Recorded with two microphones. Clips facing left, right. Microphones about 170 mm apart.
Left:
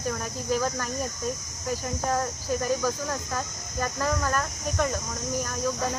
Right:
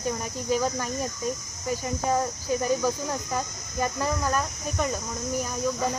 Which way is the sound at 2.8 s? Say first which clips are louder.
Right 1 dB; 15° right (ahead or behind).